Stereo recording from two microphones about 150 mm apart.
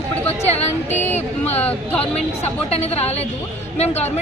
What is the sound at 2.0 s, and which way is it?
A woman's voice, 45° left (ahead or behind).